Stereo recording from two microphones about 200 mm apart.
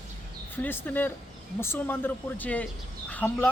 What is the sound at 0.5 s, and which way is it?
Speech, 10° left (ahead or behind).